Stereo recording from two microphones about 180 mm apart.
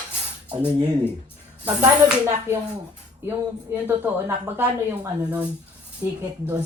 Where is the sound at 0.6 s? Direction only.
20° right (ahead or behind).